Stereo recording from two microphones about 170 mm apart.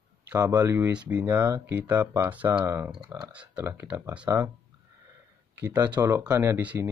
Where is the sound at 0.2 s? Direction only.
10° right (ahead or behind).